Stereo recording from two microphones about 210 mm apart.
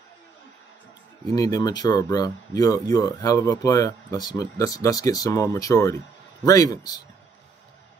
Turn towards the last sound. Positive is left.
turn(degrees=15)  # may be behind; listen again after turning